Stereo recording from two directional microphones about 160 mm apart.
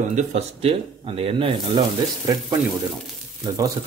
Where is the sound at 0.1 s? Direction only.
40° right (ahead or behind).